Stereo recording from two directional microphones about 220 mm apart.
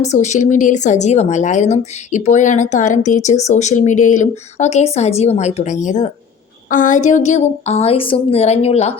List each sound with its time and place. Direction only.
0.0 s a woman's voice: 30° left (ahead or behind)